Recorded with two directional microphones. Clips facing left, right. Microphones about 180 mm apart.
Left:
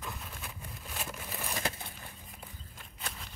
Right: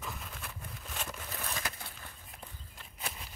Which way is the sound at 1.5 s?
20° left (ahead or behind).